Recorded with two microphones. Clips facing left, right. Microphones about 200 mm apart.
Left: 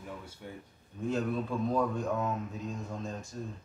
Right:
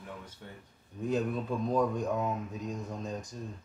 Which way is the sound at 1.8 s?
15° right (ahead or behind).